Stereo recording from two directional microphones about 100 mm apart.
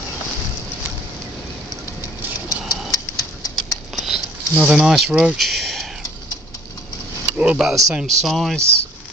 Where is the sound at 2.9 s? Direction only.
35° left (ahead or behind).